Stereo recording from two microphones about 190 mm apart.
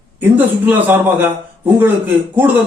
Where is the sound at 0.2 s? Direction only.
10° right (ahead or behind).